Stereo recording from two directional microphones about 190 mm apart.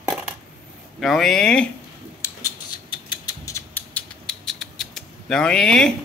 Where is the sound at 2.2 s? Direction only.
15° left (ahead or behind).